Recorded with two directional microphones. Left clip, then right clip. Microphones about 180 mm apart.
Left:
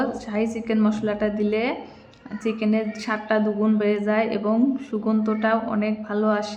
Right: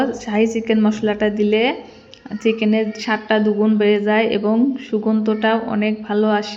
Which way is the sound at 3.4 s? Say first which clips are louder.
Right 6 dB; 10° right (ahead or behind).